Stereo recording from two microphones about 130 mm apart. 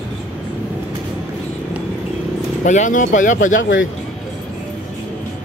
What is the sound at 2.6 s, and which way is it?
Speech, 75° left (ahead or behind).